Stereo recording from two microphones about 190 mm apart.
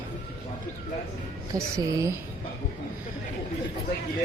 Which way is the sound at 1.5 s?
15° right (ahead or behind).